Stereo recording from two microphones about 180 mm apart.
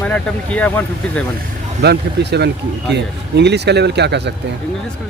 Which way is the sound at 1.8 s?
65° right (ahead or behind).